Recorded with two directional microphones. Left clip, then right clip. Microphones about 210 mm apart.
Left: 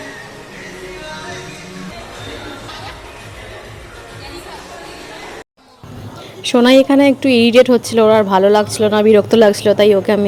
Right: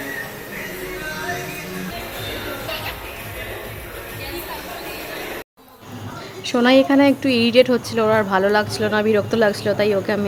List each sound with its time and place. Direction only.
6.4 s speech: 20° left (ahead or behind)